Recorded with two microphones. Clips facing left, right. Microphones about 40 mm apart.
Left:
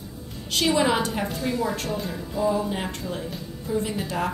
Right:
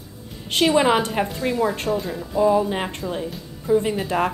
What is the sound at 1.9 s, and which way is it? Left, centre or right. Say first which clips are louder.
Speech: right 6 dB; centre.